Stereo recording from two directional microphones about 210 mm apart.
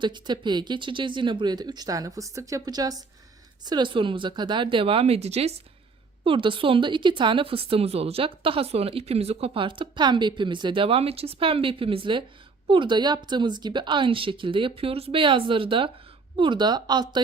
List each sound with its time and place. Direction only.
0.0 s speech: 20° right (ahead or behind)